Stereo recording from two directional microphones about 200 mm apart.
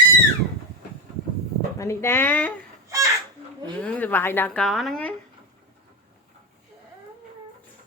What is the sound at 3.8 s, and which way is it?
Speech, 5° left (ahead or behind).